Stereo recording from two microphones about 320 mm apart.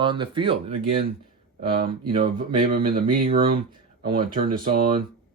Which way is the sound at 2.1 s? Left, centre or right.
Right.